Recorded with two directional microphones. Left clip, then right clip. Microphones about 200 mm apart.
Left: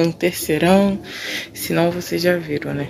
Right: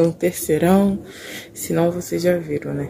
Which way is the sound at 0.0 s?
15° right (ahead or behind).